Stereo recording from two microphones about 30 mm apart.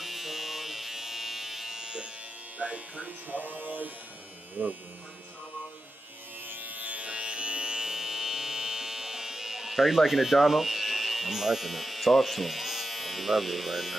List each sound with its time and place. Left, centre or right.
0.0 s electric shaver: centre
1.8 s electric shaver: right
2.6 s speech: right
3.3 s a sound: right
6.4 s electric shaver: right
7.1 s music: right
7.9 s electric shaver: centre